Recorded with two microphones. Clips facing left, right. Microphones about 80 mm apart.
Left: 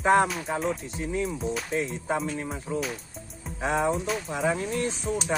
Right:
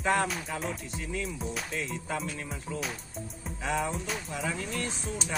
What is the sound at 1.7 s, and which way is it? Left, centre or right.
Speech, left.